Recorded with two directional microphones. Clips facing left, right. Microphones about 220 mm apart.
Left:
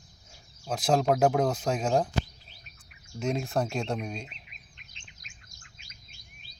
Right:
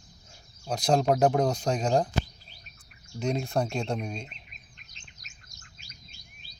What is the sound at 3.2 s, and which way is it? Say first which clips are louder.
Speech: right 1 dB; centre (ahead or behind).